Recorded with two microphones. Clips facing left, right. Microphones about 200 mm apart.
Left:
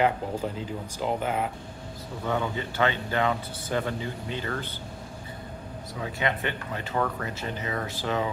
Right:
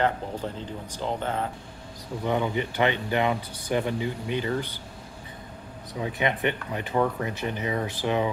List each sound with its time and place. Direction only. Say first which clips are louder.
0.9 s speech: left 1 dB; 10° left (ahead or behind)
2.2 s a man's voice: right 3 dB; 15° right (ahead or behind)
5.9 s a man's voice: right 3 dB; 20° right (ahead or behind)